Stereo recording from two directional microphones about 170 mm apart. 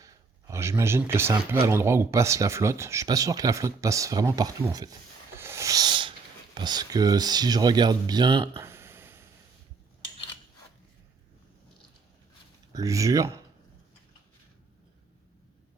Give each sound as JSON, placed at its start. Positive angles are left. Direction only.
{"t": 0.0, "sound": "speech", "side_deg": -15}
{"t": 8.5, "sound": "a sound", "side_deg": -15}
{"t": 12.7, "sound": "speech", "side_deg": -20}